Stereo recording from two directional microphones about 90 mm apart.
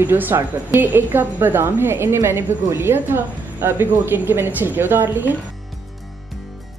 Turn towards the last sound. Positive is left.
turn(degrees=-25)  # may be behind; listen again after turning